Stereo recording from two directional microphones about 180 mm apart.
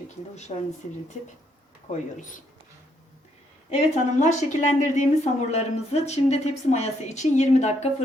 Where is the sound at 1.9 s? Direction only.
45° left (ahead or behind).